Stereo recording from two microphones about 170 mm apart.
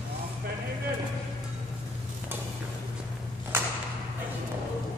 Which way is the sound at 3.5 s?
15° right (ahead or behind).